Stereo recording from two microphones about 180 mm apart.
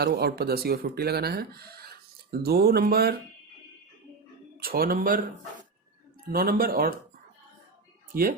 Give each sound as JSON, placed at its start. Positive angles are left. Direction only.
{"t": 0.0, "sound": "speech", "side_deg": -60}
{"t": 4.6, "sound": "speech", "side_deg": -55}
{"t": 6.3, "sound": "speech", "side_deg": -55}
{"t": 8.1, "sound": "speech", "side_deg": -50}